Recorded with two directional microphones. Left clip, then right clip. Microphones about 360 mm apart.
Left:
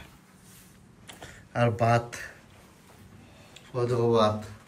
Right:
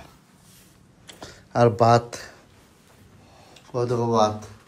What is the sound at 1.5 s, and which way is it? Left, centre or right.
Speech, centre.